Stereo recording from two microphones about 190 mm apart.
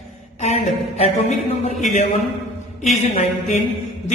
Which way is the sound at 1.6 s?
35° left (ahead or behind).